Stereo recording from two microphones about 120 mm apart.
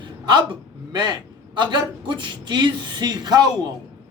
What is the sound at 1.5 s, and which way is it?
A man's voice, 40° right (ahead or behind).